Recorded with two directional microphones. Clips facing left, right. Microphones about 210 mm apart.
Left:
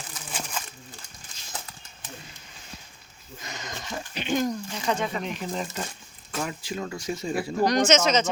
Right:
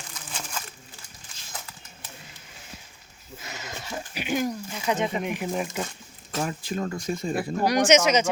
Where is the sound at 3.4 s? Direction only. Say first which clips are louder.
Left 1 dB; 5° right (ahead or behind).